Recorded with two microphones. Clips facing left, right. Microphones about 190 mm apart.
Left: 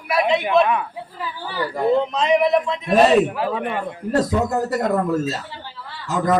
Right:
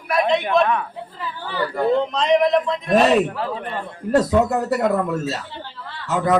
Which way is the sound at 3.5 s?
75° left (ahead or behind).